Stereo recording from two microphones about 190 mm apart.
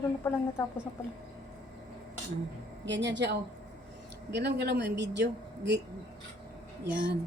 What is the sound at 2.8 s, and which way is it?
A woman's voice, 70° right (ahead or behind).